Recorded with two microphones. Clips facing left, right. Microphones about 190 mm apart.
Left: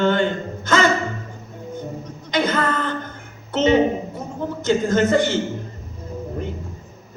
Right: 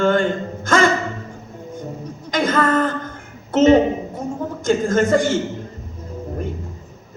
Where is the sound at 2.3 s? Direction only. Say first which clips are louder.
Right 3 dB; 45° right (ahead or behind).